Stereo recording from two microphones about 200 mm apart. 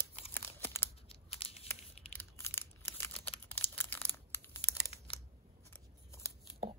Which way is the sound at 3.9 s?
10° left (ahead or behind).